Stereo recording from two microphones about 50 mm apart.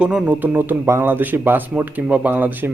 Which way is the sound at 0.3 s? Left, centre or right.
Right.